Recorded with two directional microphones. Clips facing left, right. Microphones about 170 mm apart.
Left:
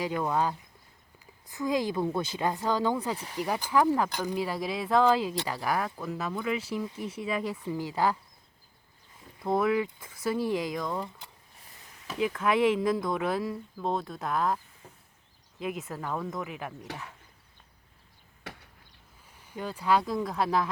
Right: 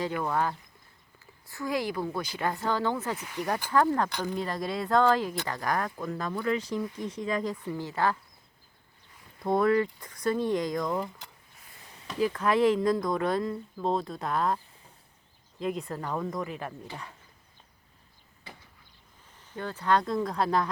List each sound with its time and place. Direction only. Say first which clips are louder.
0.0 s speech: left 1 dB; 15° left (ahead or behind)
3.2 s speech: left 1 dB; 30° left (ahead or behind)
3.4 s speech: even; 5° left (ahead or behind)
9.4 s speech: right 2 dB; centre (ahead or behind)
12.0 s speech: right 1 dB; 5° left (ahead or behind)
18.5 s chop: left 5 dB; 75° left (ahead or behind)
19.3 s speech: even; 10° left (ahead or behind)